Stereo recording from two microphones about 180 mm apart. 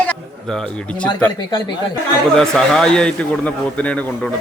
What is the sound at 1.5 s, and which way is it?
Speech, 20° left (ahead or behind).